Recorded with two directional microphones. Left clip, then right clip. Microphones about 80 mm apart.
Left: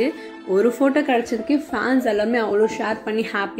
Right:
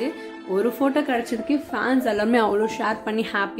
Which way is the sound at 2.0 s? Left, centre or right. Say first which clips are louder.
Right 2 dB; right.